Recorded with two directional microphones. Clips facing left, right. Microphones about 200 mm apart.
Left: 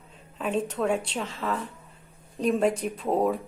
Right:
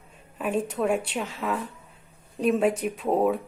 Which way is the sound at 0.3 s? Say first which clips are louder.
Right 1 dB; 10° right (ahead or behind).